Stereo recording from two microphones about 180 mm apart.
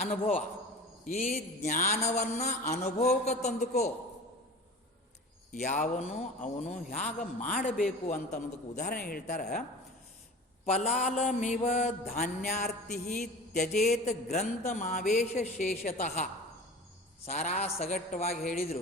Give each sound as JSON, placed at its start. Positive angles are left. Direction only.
{"t": 0.0, "sound": "a man's voice", "side_deg": 50}
{"t": 1.0, "sound": "mantra", "side_deg": 40}
{"t": 5.6, "sound": "a man's voice", "side_deg": 45}
{"t": 8.0, "sound": "mantra", "side_deg": 40}
{"t": 8.9, "sound": "a man's voice", "side_deg": 55}
{"t": 10.7, "sound": "mantra", "side_deg": 40}
{"t": 12.6, "sound": "a sound", "side_deg": 55}
{"t": 13.5, "sound": "mantra", "side_deg": 40}